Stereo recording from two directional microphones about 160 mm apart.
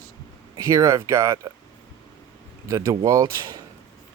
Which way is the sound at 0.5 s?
20° right (ahead or behind).